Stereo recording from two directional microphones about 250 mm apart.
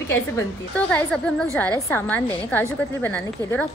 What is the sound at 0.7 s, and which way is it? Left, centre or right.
A woman's voice, centre.